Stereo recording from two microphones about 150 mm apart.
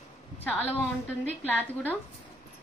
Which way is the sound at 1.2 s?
10° left (ahead or behind).